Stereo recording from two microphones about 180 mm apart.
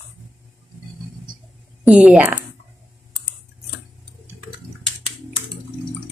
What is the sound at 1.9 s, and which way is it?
Speech, 5° right (ahead or behind).